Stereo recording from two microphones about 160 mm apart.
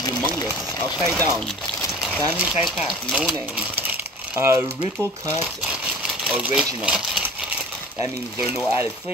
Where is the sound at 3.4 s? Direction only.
10° right (ahead or behind).